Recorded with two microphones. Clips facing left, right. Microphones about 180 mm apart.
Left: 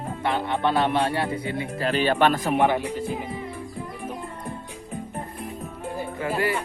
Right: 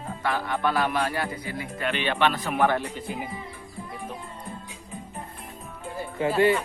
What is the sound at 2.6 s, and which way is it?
Speech, 15° left (ahead or behind).